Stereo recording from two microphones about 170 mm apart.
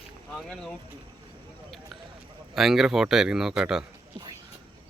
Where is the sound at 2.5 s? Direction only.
Centre (ahead or behind).